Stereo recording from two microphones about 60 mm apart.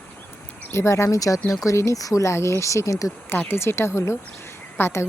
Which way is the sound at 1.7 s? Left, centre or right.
Left.